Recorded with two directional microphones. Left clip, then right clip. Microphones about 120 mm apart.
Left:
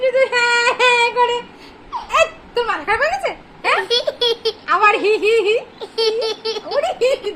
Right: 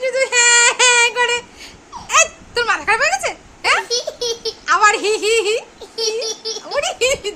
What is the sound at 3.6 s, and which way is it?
A child's voice, 20° right (ahead or behind).